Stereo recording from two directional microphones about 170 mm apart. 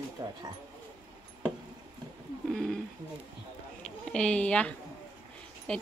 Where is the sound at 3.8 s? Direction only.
5° left (ahead or behind).